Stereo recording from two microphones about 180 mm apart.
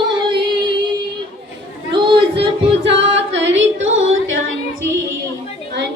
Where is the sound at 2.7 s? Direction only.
75° right (ahead or behind).